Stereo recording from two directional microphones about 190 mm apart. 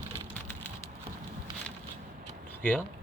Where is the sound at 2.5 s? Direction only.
5° left (ahead or behind).